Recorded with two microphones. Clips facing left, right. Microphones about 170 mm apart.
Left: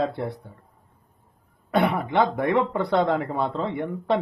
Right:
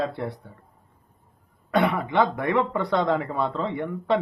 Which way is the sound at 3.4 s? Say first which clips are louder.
Even; centre (ahead or behind).